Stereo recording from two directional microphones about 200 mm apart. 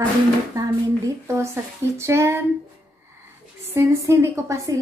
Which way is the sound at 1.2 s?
15° right (ahead or behind).